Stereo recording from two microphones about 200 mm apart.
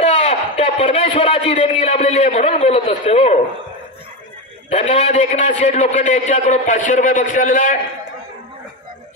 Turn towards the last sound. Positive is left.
turn(degrees=40)  # may be behind; listen again after turning